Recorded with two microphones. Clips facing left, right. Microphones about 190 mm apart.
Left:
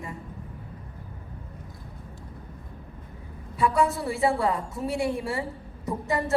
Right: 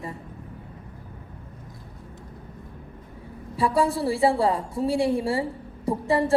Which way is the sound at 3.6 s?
30° right (ahead or behind).